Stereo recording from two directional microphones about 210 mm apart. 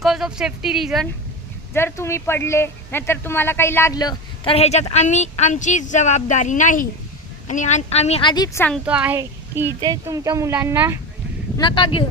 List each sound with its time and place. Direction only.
0.0 s speech: centre (ahead or behind)
1.7 s a woman's voice: 10° left (ahead or behind)
8.9 s speech: 5° right (ahead or behind)
11.5 s speech: 20° left (ahead or behind)